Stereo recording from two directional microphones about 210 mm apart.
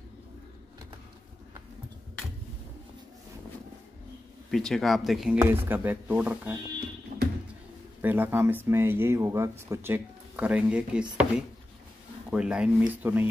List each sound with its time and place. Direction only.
4.5 s speech: centre (ahead or behind)
7.1 s music: 40° right (ahead or behind)
8.0 s speech: 10° right (ahead or behind)
12.3 s speech: 5° right (ahead or behind)